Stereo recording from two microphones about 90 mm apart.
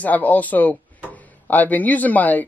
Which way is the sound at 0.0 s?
20° left (ahead or behind).